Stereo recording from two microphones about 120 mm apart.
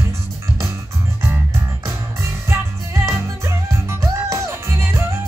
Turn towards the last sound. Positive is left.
turn(degrees=-20)  # may be behind; listen again after turning